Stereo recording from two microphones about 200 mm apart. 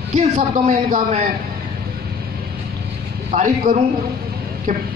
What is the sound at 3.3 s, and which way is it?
Speech, 35° right (ahead or behind).